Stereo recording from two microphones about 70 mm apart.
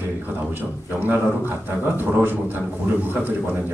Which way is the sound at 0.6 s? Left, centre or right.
Right.